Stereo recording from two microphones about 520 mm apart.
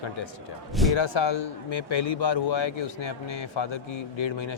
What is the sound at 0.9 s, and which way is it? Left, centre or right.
Speech, left.